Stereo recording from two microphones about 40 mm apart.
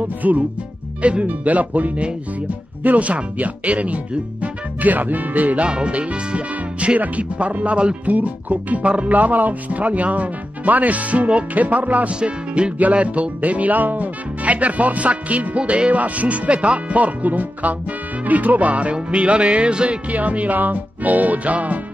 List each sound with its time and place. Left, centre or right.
0.2 s speech: right
5.7 s speech: right
12.2 s speech: right
20.1 s speech: right